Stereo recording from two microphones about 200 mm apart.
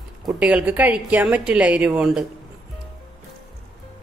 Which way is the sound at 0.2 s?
5° right (ahead or behind).